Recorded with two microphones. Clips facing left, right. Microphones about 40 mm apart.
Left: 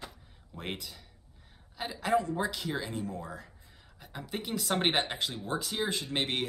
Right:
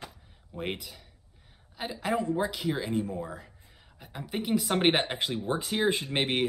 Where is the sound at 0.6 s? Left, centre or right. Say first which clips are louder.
Right 4 dB; centre.